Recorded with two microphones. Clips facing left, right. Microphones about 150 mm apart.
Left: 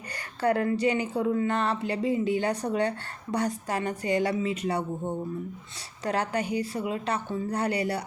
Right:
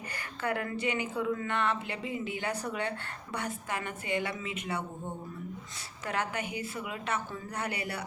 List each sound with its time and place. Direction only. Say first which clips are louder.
0.4 s speech: left 8 dB; 35° left (ahead or behind)
6.1 s speech: left 6 dB; 35° left (ahead or behind)